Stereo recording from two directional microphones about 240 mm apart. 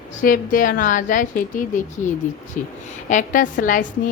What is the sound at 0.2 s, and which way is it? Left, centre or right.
A woman's voice, left.